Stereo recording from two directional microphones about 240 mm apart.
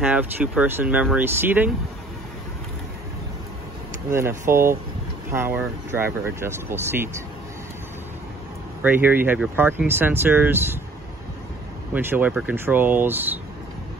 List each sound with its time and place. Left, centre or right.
0.0 s speech: centre
4.1 s speech: centre
8.8 s speech: centre
11.9 s speech: centre